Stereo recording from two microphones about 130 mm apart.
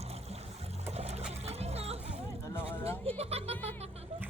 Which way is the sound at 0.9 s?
55° right (ahead or behind).